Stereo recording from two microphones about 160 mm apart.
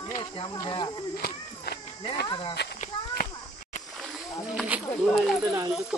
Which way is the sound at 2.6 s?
90° left.